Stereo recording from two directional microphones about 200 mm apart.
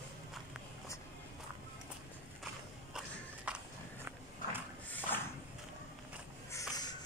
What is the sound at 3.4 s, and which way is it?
Walk, 5° right (ahead or behind).